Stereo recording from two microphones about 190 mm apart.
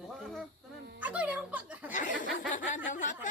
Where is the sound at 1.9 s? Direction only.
45° left (ahead or behind).